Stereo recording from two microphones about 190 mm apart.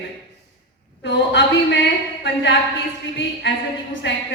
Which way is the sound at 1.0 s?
70° left (ahead or behind).